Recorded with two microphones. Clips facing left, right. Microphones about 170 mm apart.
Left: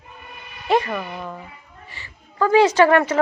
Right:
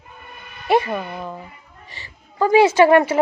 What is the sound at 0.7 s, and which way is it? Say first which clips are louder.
A woman's voice: right 2 dB; 15° right (ahead or behind).